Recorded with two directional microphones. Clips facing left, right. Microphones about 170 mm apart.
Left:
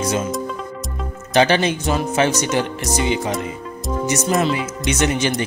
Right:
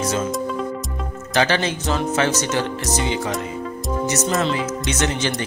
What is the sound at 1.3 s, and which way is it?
Speech, 20° left (ahead or behind).